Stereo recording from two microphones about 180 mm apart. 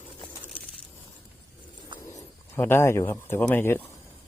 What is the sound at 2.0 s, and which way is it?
Speech, 15° left (ahead or behind).